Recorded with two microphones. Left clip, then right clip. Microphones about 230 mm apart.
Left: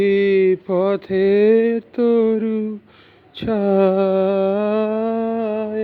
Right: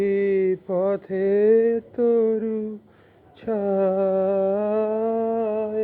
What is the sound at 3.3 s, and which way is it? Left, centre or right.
Humming, left.